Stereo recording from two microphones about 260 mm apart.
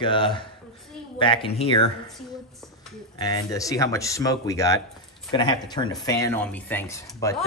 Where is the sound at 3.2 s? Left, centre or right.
Centre.